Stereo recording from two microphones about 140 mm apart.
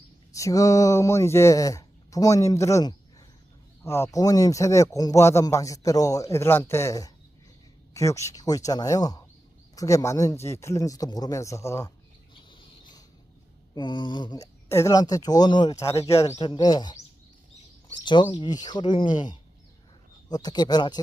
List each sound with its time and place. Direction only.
0.3 s speech: 25° left (ahead or behind)
12.3 s a sound: 35° left (ahead or behind)
13.7 s speech: 35° left (ahead or behind)
17.9 s speech: 35° left (ahead or behind)
20.3 s speech: 30° left (ahead or behind)